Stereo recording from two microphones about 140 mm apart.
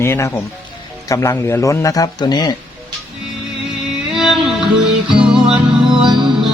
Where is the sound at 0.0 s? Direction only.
20° left (ahead or behind).